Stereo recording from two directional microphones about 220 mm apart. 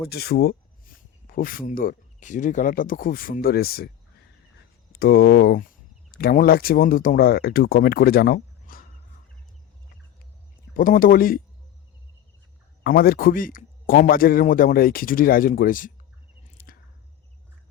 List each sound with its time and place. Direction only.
0.1 s speech: 45° left (ahead or behind)
10.8 s speech: 40° left (ahead or behind)
12.8 s speech: 45° left (ahead or behind)
16.7 s squish: 40° left (ahead or behind)